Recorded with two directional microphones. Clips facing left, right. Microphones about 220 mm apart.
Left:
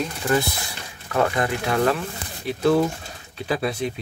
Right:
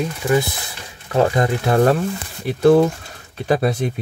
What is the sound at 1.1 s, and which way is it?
Speech, 35° right (ahead or behind).